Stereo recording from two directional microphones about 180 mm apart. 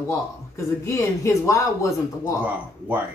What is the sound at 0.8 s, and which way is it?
A man's voice, 15° left (ahead or behind).